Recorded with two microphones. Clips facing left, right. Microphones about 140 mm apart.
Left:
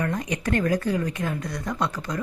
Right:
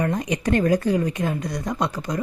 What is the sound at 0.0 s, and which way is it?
Speech, 20° right (ahead or behind).